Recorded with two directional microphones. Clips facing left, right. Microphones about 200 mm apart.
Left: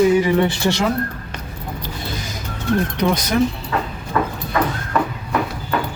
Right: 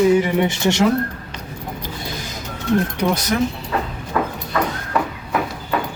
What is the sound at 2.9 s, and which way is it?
Speech, 5° right (ahead or behind).